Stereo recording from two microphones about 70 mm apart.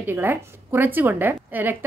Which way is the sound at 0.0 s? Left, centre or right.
Right.